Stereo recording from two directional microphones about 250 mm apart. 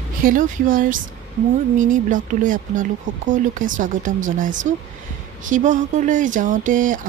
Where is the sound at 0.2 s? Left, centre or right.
Right.